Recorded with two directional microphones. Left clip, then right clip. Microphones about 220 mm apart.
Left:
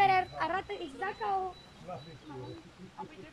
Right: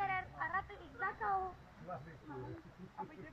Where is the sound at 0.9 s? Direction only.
30° left (ahead or behind).